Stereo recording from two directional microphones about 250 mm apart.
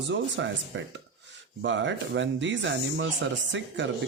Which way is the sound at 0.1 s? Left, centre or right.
Right.